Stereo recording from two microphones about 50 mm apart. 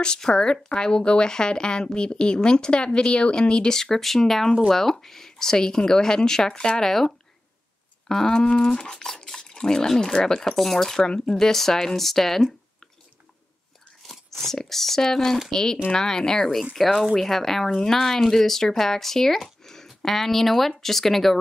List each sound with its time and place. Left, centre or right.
0.0 s speech: centre
14.0 s speech: centre
16.7 s speech: centre